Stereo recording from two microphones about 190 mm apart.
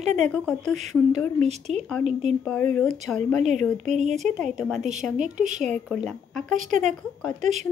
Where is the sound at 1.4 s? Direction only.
35° right (ahead or behind).